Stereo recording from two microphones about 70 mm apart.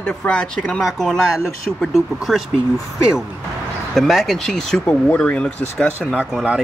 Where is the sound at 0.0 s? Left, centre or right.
Centre.